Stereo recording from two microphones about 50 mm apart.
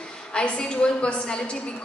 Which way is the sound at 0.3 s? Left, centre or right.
Centre.